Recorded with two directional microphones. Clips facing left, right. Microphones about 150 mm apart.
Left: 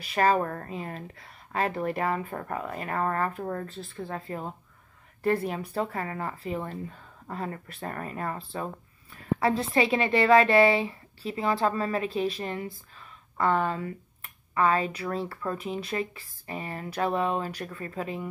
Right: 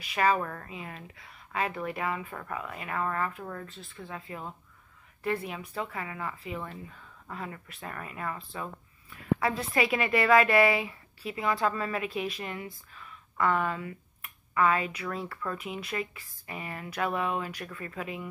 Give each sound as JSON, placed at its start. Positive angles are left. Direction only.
{"t": 0.0, "sound": "a woman's voice", "side_deg": 40}